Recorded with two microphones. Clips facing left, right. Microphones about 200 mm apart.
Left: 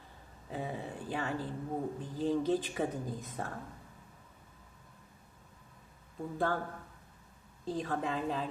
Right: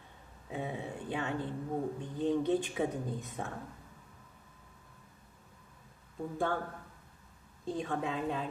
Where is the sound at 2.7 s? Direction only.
Centre (ahead or behind).